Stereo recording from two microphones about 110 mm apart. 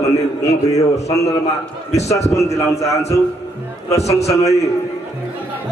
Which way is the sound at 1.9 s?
80° left.